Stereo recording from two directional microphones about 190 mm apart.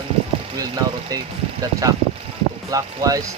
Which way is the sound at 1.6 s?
20° right (ahead or behind).